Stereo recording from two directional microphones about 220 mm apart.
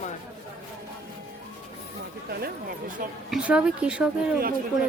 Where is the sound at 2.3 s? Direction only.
45° right (ahead or behind).